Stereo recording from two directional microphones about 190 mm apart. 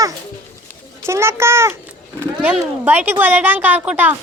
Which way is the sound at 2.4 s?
10° right (ahead or behind).